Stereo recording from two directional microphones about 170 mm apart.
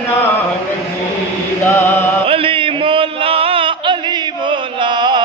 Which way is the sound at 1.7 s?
15° left (ahead or behind).